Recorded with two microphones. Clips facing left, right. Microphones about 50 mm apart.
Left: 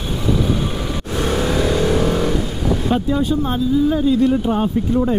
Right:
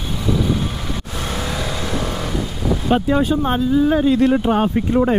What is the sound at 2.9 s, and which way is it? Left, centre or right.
Speech, right.